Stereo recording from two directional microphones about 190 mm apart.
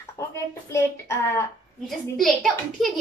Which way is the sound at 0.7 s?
15° left (ahead or behind).